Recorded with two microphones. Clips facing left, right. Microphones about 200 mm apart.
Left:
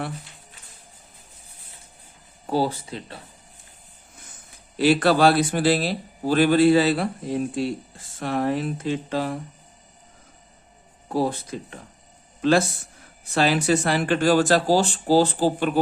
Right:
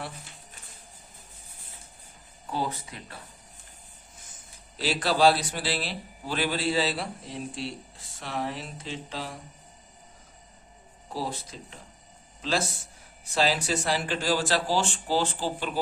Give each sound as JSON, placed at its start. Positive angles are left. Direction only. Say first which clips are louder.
{"t": 2.5, "sound": "speech", "louder": "left 8 dB", "side_deg": 30}
{"t": 4.8, "sound": "speech", "louder": "left 6 dB", "side_deg": 55}
{"t": 11.1, "sound": "speech", "louder": "left 10 dB", "side_deg": 55}